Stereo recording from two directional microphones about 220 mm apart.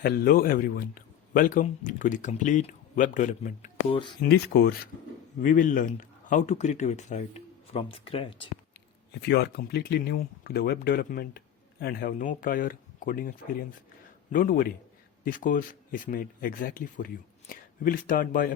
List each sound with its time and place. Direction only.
0.0 s speech: 40° left (ahead or behind); by 8.4 s 25° left (ahead or behind)
9.2 s speech: 50° left (ahead or behind)
14.3 s speech: 40° left (ahead or behind)